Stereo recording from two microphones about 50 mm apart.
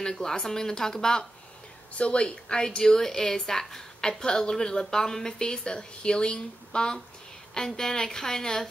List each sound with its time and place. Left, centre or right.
0.0 s speech: centre
2.0 s speech: left